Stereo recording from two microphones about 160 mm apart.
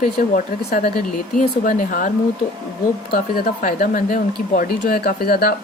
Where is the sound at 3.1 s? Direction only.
65° left (ahead or behind).